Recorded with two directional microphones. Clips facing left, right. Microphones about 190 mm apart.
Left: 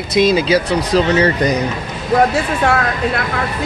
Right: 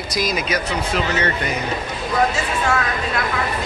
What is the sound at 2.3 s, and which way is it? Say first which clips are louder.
Speech: left 5 dB; 60° left (ahead or behind).